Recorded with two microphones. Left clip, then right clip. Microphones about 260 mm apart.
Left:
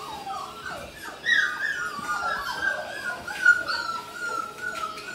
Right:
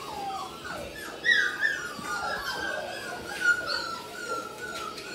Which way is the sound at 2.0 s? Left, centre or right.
Centre.